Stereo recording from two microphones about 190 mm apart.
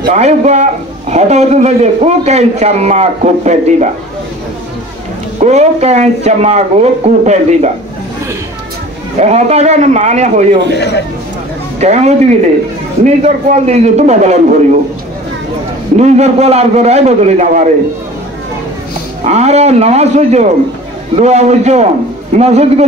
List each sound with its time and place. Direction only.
0.1 s a man's voice: 35° right (ahead or behind)
5.4 s a man's voice: 35° right (ahead or behind)
9.2 s a man's voice: 35° right (ahead or behind)
10.8 s speech: 65° left (ahead or behind)
11.8 s a man's voice: 35° right (ahead or behind)
16.0 s a man's voice: 35° right (ahead or behind)
19.2 s a man's voice: 35° right (ahead or behind)